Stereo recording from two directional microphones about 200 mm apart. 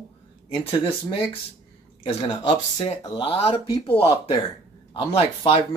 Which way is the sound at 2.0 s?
25° left (ahead or behind).